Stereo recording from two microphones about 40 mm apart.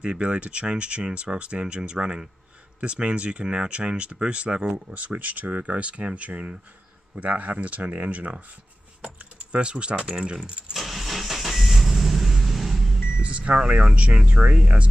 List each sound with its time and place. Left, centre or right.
0.0 s speech: right
9.2 s speech: right
10.7 s vehicle: centre
13.2 s vehicle: right
13.6 s speech: centre